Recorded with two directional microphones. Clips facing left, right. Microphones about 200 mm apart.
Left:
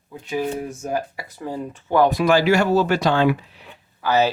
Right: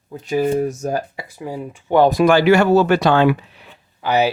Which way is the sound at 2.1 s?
50° right (ahead or behind).